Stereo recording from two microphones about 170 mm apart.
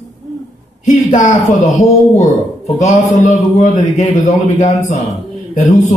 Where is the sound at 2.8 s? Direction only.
45° left (ahead or behind).